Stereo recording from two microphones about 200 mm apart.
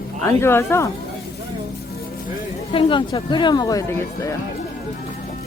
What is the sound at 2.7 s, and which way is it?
Speech, 25° left (ahead or behind).